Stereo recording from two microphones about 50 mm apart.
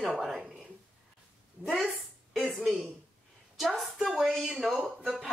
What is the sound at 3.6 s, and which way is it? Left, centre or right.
Speech, centre.